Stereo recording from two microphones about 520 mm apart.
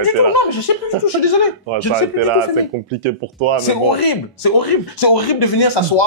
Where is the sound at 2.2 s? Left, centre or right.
Right.